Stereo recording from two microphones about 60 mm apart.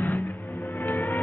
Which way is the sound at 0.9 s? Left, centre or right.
Left.